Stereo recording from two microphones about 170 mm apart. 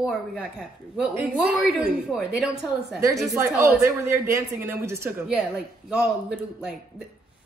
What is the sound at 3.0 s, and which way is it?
A woman's voice, 20° right (ahead or behind).